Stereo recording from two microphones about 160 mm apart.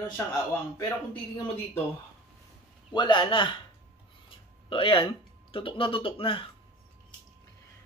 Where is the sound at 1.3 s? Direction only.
35° left (ahead or behind).